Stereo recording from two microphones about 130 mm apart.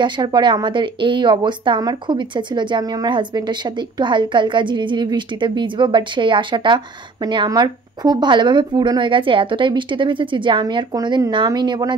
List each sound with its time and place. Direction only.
0.0 s a woman's voice: 35° right (ahead or behind)